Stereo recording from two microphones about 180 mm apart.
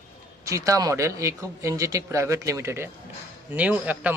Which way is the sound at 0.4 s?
15° right (ahead or behind).